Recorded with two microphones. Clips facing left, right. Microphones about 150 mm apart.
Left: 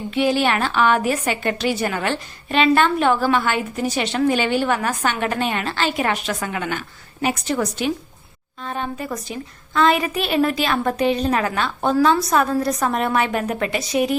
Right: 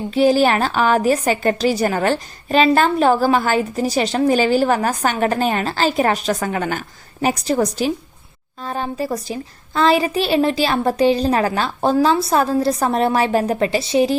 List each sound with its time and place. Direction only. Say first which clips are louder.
0.1 s a woman's voice: right 5 dB; 40° right (ahead or behind)